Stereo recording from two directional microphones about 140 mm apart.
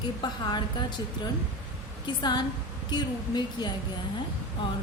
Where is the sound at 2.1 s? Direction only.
30° left (ahead or behind).